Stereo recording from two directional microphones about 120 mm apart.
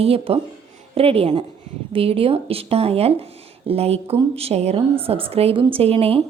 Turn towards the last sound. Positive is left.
turn(degrees=-55)  # may be behind; listen again after turning